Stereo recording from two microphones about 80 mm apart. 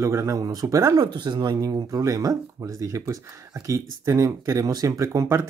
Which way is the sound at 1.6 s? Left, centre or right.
Right.